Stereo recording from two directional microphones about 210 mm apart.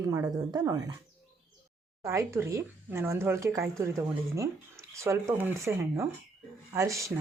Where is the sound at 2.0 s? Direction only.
15° right (ahead or behind).